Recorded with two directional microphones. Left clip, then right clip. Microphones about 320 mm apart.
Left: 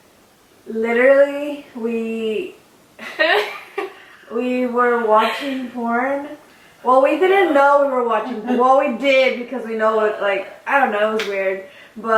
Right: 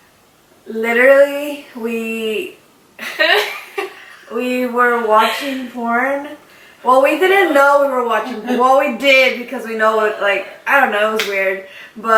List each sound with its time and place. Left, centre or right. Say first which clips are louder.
0.8 s a man's voice: right 3 dB; centre